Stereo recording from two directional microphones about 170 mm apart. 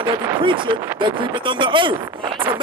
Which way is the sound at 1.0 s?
30° right (ahead or behind).